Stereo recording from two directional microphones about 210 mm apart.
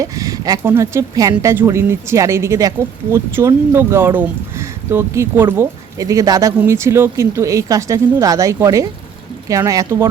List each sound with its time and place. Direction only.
0.0 s a woman's voice: 15° right (ahead or behind)